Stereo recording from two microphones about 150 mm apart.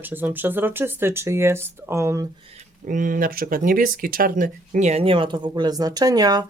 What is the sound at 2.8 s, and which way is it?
Speech, 65° right (ahead or behind).